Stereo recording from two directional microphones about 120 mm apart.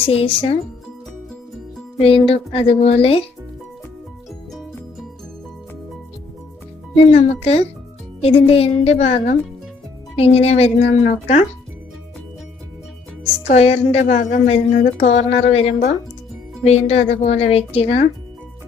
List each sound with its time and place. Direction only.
0.0 s speech: 50° left (ahead or behind)
2.0 s speech: 50° left (ahead or behind)
7.1 s a woman's voice: 55° left (ahead or behind)
13.5 s a woman's voice: 60° left (ahead or behind)